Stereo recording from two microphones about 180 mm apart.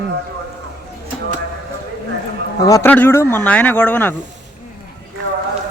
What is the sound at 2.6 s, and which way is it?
Speech, 15° left (ahead or behind).